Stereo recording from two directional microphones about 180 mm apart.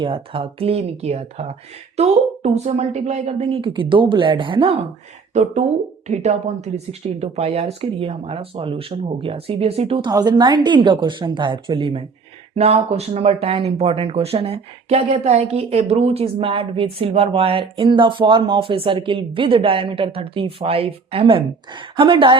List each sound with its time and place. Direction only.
0.0 s speech: 30° right (ahead or behind)
5.3 s speech: 40° right (ahead or behind)